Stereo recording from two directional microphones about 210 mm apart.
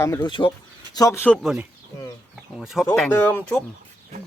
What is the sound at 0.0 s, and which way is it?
Speech, 20° left (ahead or behind).